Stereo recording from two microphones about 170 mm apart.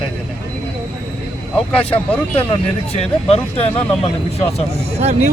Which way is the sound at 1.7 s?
10° left (ahead or behind).